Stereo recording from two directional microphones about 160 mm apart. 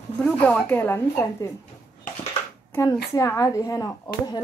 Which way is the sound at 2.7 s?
20° left (ahead or behind).